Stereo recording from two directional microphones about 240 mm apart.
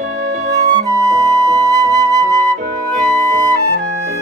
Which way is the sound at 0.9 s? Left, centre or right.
Centre.